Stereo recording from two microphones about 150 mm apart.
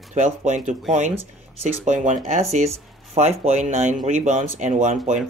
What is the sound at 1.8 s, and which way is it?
Speech, 55° right (ahead or behind).